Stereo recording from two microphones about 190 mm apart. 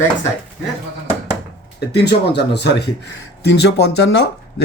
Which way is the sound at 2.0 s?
60° left (ahead or behind).